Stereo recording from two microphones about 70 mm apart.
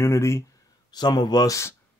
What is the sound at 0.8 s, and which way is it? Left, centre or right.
Speech, left.